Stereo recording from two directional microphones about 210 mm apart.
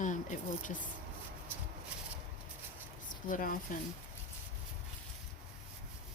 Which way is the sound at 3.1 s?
40° left (ahead or behind).